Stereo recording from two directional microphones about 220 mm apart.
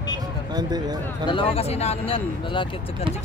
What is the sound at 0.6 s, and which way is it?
Speech, 20° right (ahead or behind).